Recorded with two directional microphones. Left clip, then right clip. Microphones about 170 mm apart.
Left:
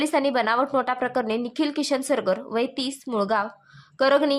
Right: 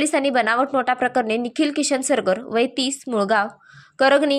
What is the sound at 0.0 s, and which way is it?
A woman's voice, 10° right (ahead or behind).